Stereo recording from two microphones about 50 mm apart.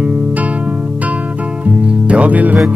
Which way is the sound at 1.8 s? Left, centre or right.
Right.